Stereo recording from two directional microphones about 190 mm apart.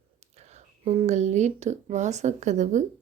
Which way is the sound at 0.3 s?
35° right (ahead or behind).